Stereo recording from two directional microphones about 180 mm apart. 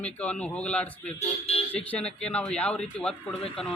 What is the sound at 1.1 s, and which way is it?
Speech, 35° left (ahead or behind).